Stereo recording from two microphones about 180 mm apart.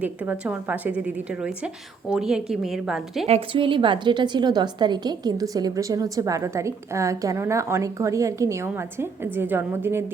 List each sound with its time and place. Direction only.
0.0 s a woman's voice: 10° right (ahead or behind)
3.2 s a woman's voice: 30° right (ahead or behind); by 10.0 s 10° right (ahead or behind)